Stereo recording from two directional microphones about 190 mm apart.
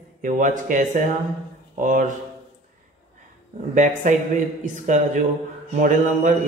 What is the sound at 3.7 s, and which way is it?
Speech, 40° right (ahead or behind).